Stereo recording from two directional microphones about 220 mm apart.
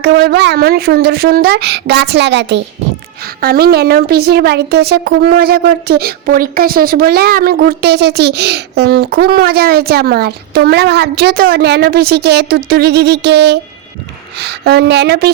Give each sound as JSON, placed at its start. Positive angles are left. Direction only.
{"t": 0.0, "sound": "a woman's voice", "side_deg": -50}